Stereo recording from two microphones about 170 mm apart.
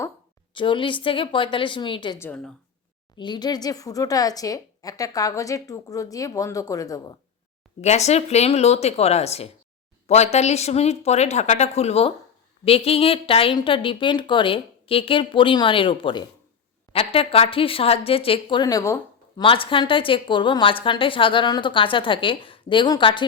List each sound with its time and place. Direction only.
0.5 s speech: 30° left (ahead or behind)
2.1 s a woman's voice: 15° left (ahead or behind)
3.2 s speech: 25° left (ahead or behind)
7.8 s a woman's voice: 40° left (ahead or behind); by 18.9 s 20° left (ahead or behind)
19.4 s speech: 30° left (ahead or behind)